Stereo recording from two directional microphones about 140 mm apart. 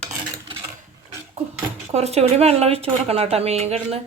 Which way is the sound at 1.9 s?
50° right (ahead or behind).